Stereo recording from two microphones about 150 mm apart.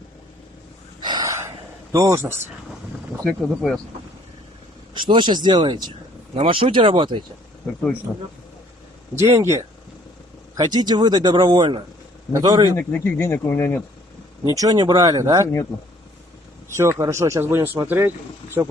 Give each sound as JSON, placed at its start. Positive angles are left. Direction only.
{"t": 1.0, "sound": "a sound", "side_deg": -30}
{"t": 2.0, "sound": "speech", "side_deg": -15}
{"t": 3.3, "sound": "speech", "side_deg": 5}
{"t": 4.9, "sound": "speech", "side_deg": -30}
{"t": 9.1, "sound": "speech", "side_deg": -15}
{"t": 12.7, "sound": "speech", "side_deg": 15}
{"t": 14.5, "sound": "speech", "side_deg": -25}
{"t": 15.4, "sound": "speech", "side_deg": 20}
{"t": 16.6, "sound": "speech", "side_deg": -15}